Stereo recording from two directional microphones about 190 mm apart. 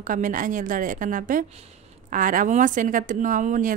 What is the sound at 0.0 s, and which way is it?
A woman's voice, 45° right (ahead or behind).